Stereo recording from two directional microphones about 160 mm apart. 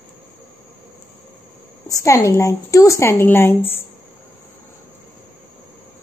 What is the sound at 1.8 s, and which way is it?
A woman's voice, 20° left (ahead or behind).